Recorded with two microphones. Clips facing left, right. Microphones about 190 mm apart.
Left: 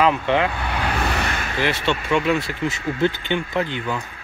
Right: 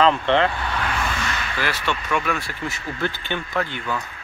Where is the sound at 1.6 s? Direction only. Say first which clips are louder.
Left 5 dB; 25° left (ahead or behind).